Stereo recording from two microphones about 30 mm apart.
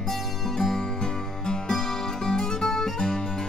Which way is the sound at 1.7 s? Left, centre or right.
Centre.